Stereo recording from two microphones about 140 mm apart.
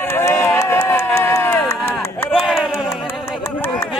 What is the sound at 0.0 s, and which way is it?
Run, 15° left (ahead or behind).